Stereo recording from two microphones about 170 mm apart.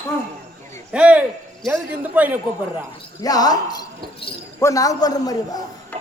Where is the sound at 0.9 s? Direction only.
5° right (ahead or behind).